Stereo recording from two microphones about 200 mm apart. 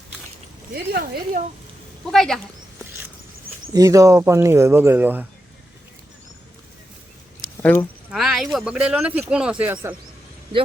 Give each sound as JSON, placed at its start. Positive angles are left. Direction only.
{"t": 0.7, "sound": "speech", "side_deg": -50}
{"t": 2.0, "sound": "speech", "side_deg": 0}
{"t": 3.7, "sound": "speech", "side_deg": -15}
{"t": 7.5, "sound": "a sound", "side_deg": 10}
{"t": 8.1, "sound": "speech", "side_deg": 0}